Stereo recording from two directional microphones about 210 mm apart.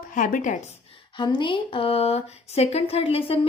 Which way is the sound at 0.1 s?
40° left (ahead or behind).